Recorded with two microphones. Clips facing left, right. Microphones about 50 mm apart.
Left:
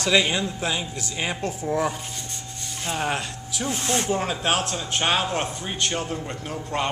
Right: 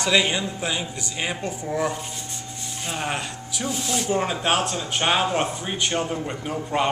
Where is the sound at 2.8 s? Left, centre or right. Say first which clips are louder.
Left 2 dB; centre.